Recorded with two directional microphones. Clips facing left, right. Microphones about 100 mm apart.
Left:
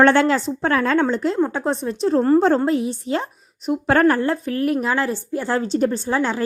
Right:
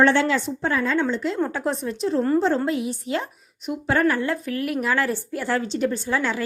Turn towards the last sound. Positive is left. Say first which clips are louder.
# left 3 dB
turn(degrees=30)  # may be behind; listen again after turning